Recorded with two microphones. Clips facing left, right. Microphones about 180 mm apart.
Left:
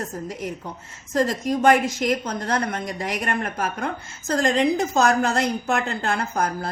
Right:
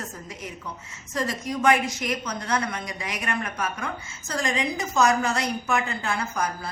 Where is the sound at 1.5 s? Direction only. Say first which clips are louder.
Left 3 dB; 50° left (ahead or behind).